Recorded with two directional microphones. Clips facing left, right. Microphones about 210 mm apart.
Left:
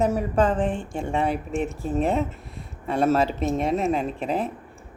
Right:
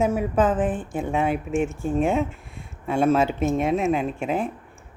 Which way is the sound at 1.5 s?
35° left (ahead or behind).